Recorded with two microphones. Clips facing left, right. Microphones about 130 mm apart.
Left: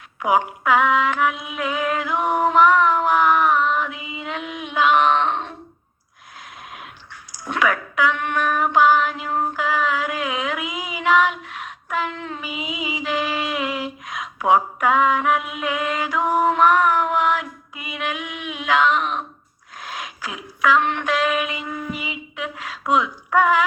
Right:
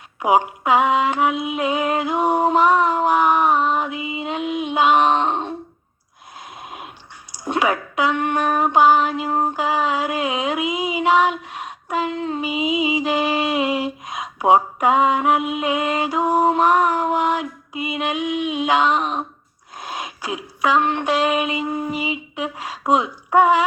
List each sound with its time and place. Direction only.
0.2 s female singing: 25° right (ahead or behind)
7.4 s a sound: 25° right (ahead or behind)
19.8 s female singing: 30° right (ahead or behind)
22.9 s speech: 30° right (ahead or behind)